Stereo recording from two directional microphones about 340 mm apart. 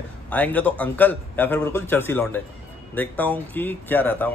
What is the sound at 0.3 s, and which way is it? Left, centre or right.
Speech, centre.